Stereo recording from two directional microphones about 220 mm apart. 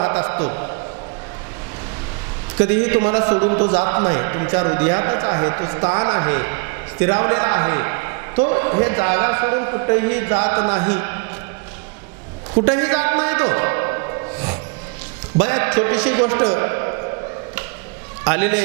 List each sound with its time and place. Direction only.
0.0 s a sound: 20° right (ahead or behind)
2.6 s a man's voice: 15° right (ahead or behind)
12.5 s music: 20° right (ahead or behind)
15.4 s a man's voice: 15° right (ahead or behind)
18.3 s a man's voice: 15° right (ahead or behind)